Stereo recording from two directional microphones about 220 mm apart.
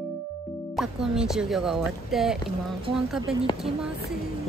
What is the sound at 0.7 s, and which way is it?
Speech, centre (ahead or behind).